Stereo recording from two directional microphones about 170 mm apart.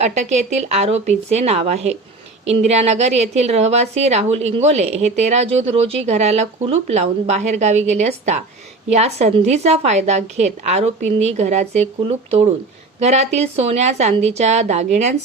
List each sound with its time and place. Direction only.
0.0 s a woman's voice: 45° right (ahead or behind)